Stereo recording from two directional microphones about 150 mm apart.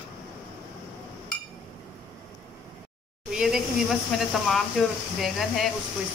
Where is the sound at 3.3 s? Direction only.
5° right (ahead or behind).